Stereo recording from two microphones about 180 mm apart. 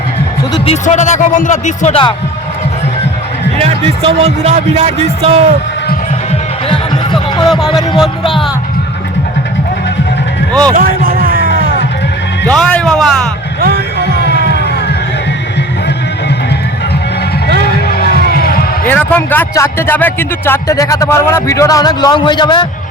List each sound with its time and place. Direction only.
0.5 s speech: 35° left (ahead or behind)
3.6 s speech: 35° right (ahead or behind)
6.7 s music: 25° left (ahead or behind)
7.4 s a man's voice: centre (ahead or behind)
10.8 s a sound: 55° right (ahead or behind)
12.5 s a man's voice: 5° left (ahead or behind)
13.6 s music: 60° right (ahead or behind)
17.8 s music: 60° left (ahead or behind)
18.9 s speech: 10° left (ahead or behind); by 22.6 s 25° left (ahead or behind)